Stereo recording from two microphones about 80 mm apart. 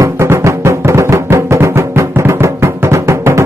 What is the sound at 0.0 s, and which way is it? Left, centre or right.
Music, right.